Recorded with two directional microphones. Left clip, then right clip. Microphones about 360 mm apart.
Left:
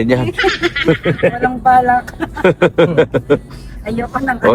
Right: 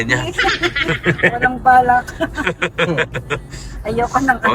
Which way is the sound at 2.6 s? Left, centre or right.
Centre.